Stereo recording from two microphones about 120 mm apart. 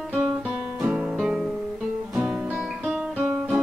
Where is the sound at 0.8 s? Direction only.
10° right (ahead or behind).